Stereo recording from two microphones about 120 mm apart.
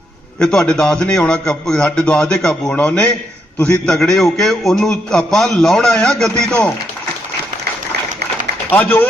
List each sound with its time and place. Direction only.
0.3 s a man's voice: 5° left (ahead or behind)
8.7 s a man's voice: 20° left (ahead or behind)